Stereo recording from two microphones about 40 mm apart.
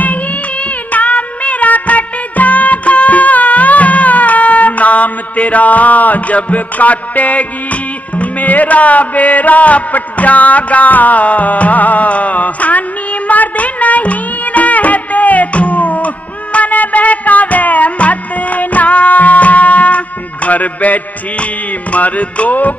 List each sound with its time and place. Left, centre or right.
0.9 s music: left